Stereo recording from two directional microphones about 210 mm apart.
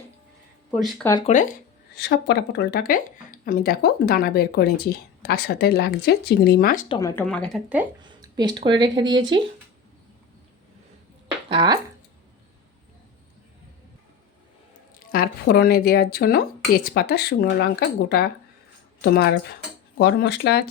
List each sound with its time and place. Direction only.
0.7 s speech: centre (ahead or behind)
1.3 s speech: 40° left (ahead or behind)
2.0 s speech: 50° left (ahead or behind)
6.8 s speech: 20° left (ahead or behind)
7.3 s speech: 5° left (ahead or behind)
8.0 s speech: 20° right (ahead or behind)
11.4 s speech: 20° right (ahead or behind)
14.9 s speech: 45° left (ahead or behind)